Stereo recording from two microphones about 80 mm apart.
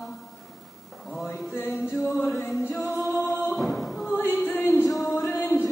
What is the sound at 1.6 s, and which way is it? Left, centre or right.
A capella, centre.